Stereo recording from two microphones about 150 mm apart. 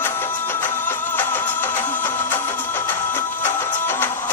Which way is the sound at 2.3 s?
15° left (ahead or behind).